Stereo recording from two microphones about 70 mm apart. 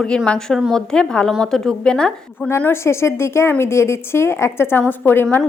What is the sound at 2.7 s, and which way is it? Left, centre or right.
A woman's voice, left.